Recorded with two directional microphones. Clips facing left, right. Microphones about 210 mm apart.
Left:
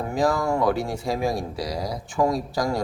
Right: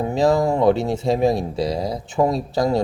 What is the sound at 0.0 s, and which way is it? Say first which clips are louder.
Speech: right 5 dB; 25° right (ahead or behind).